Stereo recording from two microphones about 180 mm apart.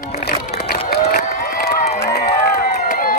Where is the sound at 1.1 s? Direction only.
55° left (ahead or behind).